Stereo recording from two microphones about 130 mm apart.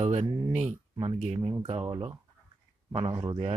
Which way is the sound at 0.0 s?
60° right (ahead or behind).